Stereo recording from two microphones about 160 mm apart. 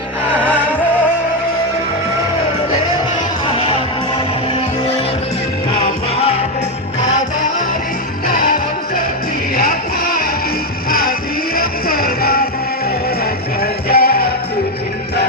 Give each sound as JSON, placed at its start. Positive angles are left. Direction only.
{"t": 3.5, "sound": "music", "side_deg": 35}
{"t": 8.3, "sound": "music", "side_deg": 65}
{"t": 13.6, "sound": "music", "side_deg": 70}